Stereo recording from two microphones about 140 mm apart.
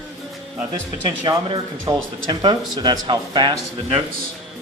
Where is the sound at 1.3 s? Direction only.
35° right (ahead or behind).